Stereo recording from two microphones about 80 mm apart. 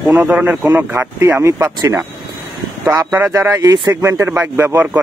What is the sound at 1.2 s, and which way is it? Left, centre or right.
Speech, right.